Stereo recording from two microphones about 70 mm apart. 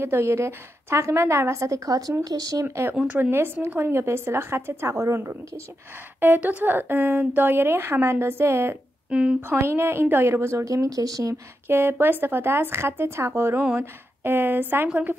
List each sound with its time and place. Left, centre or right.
0.0 s a woman's voice: right
2.6 s a woman's voice: right
6.2 s a woman's voice: right
9.1 s speech: centre
9.5 s a woman's voice: right
10.6 s speech: right
11.6 s a woman's voice: right